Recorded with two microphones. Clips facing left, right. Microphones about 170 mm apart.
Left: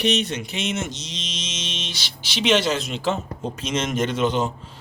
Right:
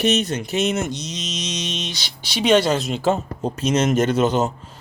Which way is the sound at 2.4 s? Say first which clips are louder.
Right 4 dB; 45° right (ahead or behind).